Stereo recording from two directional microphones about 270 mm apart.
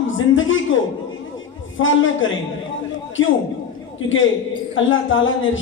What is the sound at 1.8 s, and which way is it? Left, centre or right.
A man's voice, left.